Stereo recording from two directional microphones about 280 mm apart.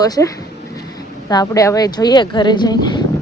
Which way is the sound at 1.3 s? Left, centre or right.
Centre.